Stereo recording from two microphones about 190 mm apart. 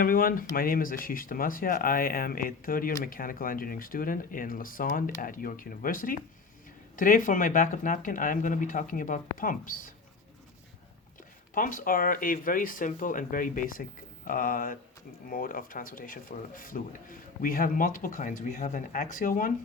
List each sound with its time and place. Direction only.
0.0 s speech: 50° left (ahead or behind)
11.5 s speech: 45° left (ahead or behind)